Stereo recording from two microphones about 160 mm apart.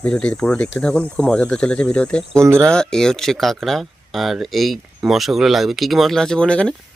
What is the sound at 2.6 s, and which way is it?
Speech, 5° left (ahead or behind).